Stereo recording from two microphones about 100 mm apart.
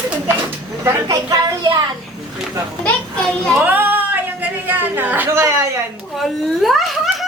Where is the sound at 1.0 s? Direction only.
35° right (ahead or behind).